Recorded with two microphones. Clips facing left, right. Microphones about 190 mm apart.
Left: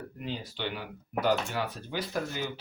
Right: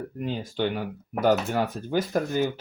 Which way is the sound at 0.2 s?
45° right (ahead or behind).